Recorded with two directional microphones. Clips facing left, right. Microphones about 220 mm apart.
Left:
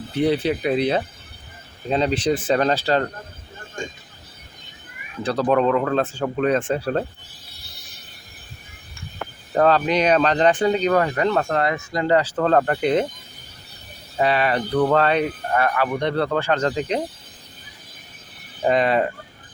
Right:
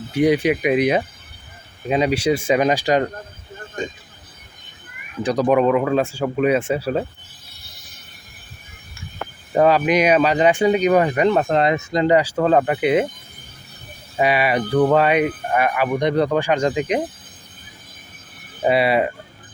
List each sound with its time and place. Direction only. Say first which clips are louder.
0.1 s speech: right 3 dB; 10° right (ahead or behind)
5.2 s speech: right 2 dB; 15° right (ahead or behind)
9.5 s speech: right 2 dB; 10° right (ahead or behind)
14.2 s speech: right 2 dB; 10° right (ahead or behind)
18.6 s speech: right 2 dB; 10° right (ahead or behind)